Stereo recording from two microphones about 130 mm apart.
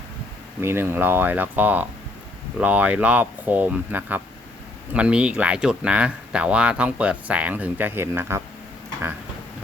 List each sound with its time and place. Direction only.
0.6 s speech: 20° right (ahead or behind)